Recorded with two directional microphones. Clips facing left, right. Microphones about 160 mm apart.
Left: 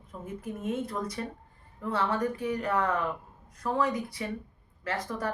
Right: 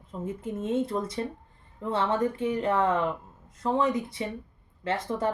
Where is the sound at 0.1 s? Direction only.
25° right (ahead or behind).